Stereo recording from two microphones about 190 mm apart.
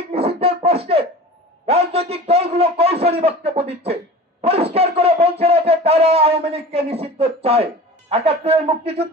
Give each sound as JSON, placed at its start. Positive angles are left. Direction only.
{"t": 0.1, "sound": "beatboxing", "side_deg": -30}
{"t": 1.7, "sound": "a sound", "side_deg": -30}
{"t": 8.1, "sound": "a man's voice", "side_deg": -30}